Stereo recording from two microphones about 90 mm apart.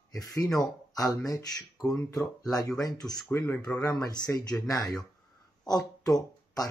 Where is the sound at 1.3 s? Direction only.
40° left (ahead or behind).